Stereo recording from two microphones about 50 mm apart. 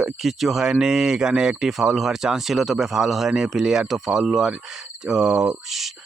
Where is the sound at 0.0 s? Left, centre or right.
Centre.